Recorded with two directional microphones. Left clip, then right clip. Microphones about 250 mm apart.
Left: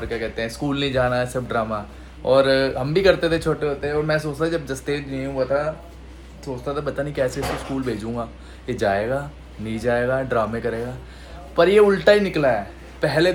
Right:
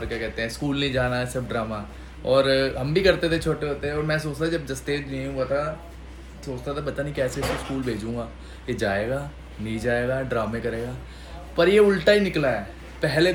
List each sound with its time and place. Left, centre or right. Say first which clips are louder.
0.0 s speech: left 2 dB; centre